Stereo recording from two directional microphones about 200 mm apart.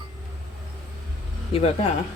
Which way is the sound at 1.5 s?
30° left (ahead or behind).